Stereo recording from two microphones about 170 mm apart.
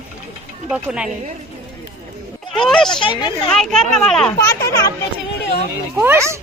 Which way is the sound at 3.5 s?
5° left (ahead or behind).